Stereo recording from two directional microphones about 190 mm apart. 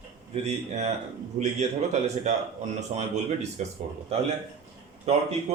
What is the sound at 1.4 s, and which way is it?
Speech, 40° right (ahead or behind).